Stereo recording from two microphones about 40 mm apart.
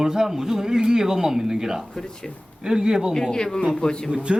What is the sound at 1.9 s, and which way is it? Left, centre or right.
Speech, centre.